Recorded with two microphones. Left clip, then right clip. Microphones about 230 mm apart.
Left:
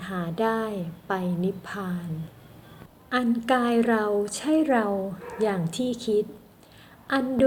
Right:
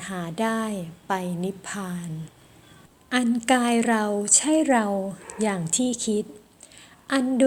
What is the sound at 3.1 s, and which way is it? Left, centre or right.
A woman's voice, right.